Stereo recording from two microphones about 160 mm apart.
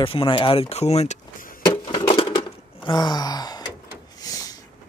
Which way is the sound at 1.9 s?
30° left (ahead or behind).